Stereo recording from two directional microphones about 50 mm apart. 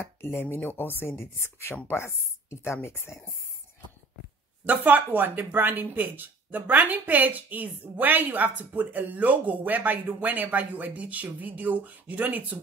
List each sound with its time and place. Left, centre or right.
0.2 s speech: left
4.6 s speech: right